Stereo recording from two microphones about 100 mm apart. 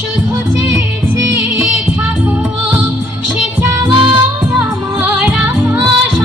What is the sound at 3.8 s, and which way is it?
Music, 50° right (ahead or behind).